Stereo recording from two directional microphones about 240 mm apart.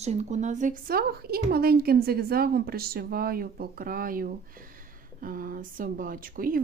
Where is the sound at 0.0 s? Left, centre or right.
Right.